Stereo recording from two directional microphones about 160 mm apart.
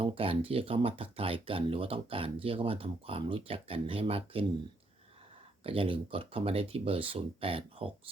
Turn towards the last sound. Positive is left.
turn(degrees=-35)  # may be behind; listen again after turning